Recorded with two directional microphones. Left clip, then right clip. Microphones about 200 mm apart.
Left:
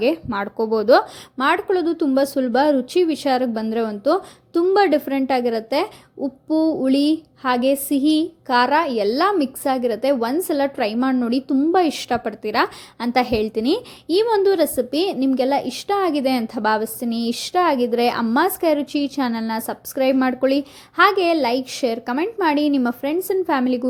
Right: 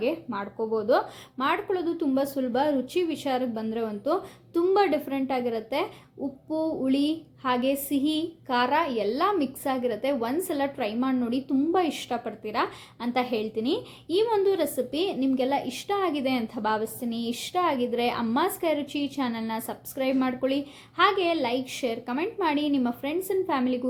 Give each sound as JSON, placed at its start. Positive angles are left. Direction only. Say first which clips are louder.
{"t": 0.0, "sound": "speech", "louder": "left 8 dB", "side_deg": 45}